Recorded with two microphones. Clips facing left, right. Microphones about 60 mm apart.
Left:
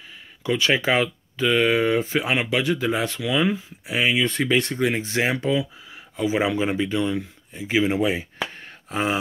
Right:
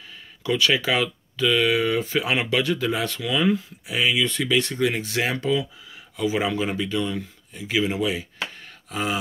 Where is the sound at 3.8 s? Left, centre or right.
Left.